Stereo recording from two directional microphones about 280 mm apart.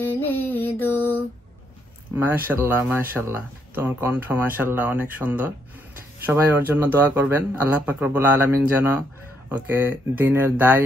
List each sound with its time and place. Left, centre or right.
0.0 s music: centre
2.1 s speech: centre